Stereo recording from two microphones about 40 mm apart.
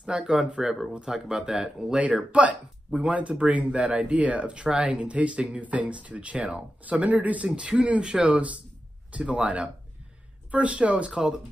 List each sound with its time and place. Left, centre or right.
0.0 s speech: right
0.6 s speech: centre
0.9 s speech: right
2.3 s speech: right
6.9 s speech: right
7.4 s speech: right
11.1 s speech: centre